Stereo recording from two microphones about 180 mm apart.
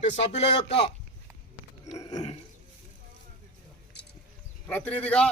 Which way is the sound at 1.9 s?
20° left (ahead or behind).